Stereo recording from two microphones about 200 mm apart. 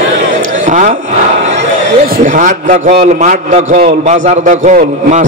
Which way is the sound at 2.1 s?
40° right (ahead or behind).